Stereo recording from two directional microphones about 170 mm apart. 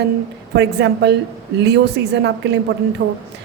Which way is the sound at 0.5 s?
85° right.